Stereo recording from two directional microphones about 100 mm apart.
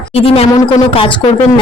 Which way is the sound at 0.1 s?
90° left.